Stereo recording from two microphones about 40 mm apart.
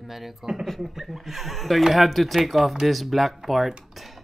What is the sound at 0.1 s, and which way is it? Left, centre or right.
Speech, centre.